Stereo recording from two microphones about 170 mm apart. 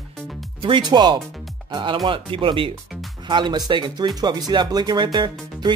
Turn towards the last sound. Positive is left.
turn(degrees=-25)  # may be behind; listen again after turning